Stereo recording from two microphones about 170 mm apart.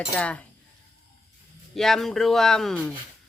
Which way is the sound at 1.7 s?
Centre (ahead or behind).